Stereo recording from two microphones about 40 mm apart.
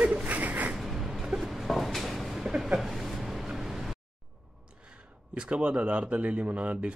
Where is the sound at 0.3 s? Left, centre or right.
Right.